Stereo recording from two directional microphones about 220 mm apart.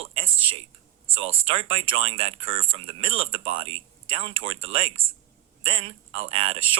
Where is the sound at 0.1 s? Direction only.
25° right (ahead or behind).